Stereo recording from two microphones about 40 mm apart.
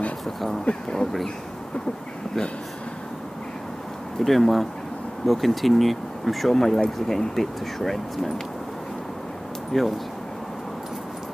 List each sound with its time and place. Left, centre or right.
0.7 s speech: left
4.2 s speech: centre
9.7 s speech: centre